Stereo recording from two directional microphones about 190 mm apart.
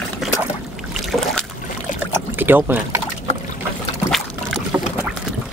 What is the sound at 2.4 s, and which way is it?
Speech, 10° right (ahead or behind).